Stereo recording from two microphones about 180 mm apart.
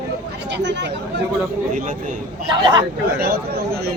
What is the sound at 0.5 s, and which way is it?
Chatter, 75° right (ahead or behind).